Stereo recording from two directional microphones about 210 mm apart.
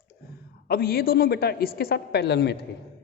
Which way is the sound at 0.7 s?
45° left (ahead or behind).